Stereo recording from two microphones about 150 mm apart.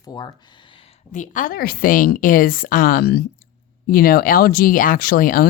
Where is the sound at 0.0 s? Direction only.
25° left (ahead or behind).